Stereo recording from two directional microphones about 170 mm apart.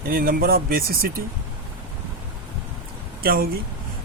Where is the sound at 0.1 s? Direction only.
60° right (ahead or behind).